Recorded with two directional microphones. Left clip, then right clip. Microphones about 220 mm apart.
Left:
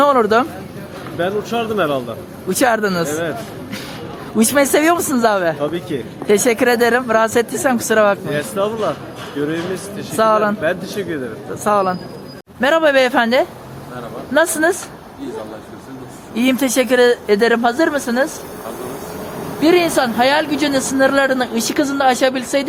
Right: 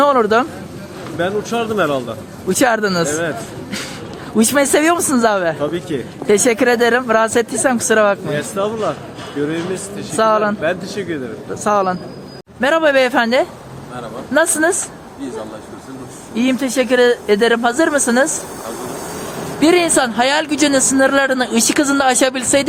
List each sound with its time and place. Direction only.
0.0 s speech: 5° right (ahead or behind)
16.3 s speech: 5° left (ahead or behind); by 18.3 s 15° right (ahead or behind)
19.5 s a woman's voice: 15° right (ahead or behind)